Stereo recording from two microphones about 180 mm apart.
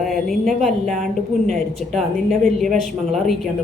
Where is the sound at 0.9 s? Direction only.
45° right (ahead or behind).